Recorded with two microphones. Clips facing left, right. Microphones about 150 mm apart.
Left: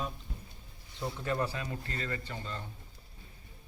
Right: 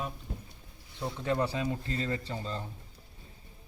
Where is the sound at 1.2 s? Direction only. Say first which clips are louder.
Right 4 dB; 20° right (ahead or behind).